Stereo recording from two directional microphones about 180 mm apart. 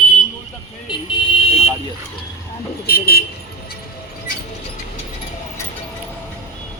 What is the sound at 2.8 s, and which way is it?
Speech, 60° left (ahead or behind).